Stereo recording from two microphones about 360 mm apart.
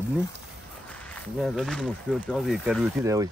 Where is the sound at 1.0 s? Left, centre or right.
Centre.